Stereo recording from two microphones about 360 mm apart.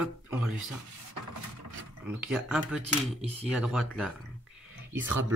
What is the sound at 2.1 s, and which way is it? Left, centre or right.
Speech, centre.